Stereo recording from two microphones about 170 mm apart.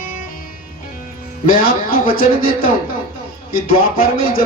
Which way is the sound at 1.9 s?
55° left (ahead or behind).